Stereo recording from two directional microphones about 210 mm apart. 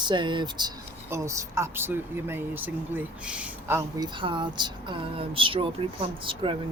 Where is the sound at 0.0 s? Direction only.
20° right (ahead or behind).